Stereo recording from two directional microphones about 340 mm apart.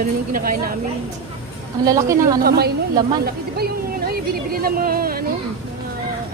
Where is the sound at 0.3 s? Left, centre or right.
Right.